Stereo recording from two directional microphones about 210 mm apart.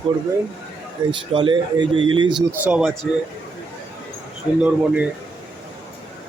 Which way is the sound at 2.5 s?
5° right (ahead or behind).